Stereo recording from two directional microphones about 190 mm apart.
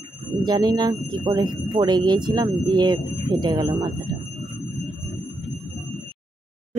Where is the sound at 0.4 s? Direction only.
20° right (ahead or behind).